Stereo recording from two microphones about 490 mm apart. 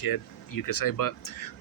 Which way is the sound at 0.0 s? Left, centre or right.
Left.